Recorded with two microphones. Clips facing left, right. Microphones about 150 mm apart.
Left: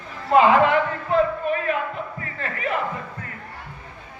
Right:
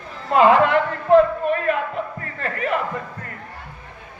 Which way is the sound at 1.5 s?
50° right (ahead or behind).